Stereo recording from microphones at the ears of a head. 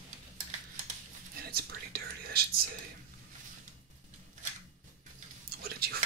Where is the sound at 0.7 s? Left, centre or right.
Right.